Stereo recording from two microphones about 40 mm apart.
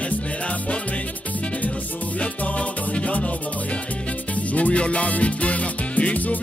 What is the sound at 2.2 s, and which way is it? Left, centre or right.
Music, left.